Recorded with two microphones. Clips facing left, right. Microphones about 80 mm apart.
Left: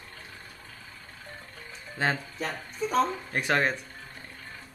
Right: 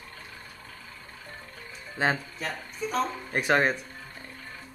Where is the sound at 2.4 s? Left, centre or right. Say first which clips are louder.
Left 2 dB; left.